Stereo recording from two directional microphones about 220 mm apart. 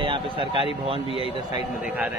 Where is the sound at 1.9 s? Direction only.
10° right (ahead or behind).